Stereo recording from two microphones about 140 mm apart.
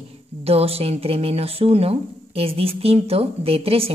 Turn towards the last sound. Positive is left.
turn(degrees=-45)  # may be behind; listen again after turning